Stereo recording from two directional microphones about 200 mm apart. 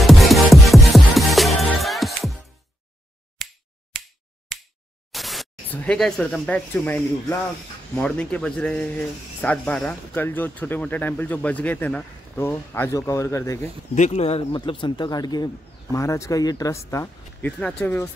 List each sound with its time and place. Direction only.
0.0 s music: centre (ahead or behind)
3.4 s finger snapping: centre (ahead or behind)
5.1 s speech: centre (ahead or behind)
13.9 s speech: 35° left (ahead or behind); by 18.1 s 10° left (ahead or behind)